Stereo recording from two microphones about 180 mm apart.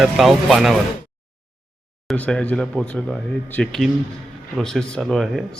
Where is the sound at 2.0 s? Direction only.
5° left (ahead or behind).